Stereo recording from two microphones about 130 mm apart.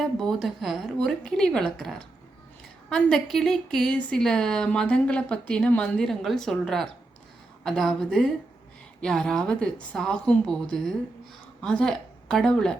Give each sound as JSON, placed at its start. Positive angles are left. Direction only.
{"t": 0.0, "sound": "a woman's voice", "side_deg": 5}